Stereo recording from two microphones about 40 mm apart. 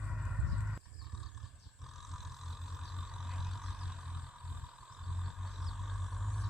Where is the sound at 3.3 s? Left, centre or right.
Centre.